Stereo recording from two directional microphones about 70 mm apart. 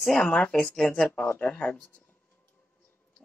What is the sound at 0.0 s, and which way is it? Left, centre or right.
Speech, centre.